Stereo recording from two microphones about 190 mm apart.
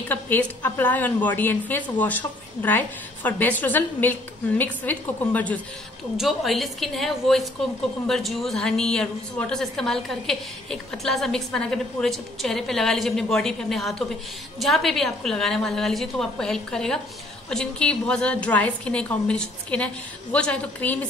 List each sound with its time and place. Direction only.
0.1 s a woman's voice: 10° left (ahead or behind)